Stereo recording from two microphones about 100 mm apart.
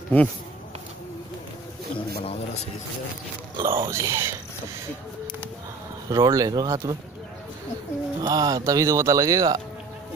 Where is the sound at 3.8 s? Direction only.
30° right (ahead or behind).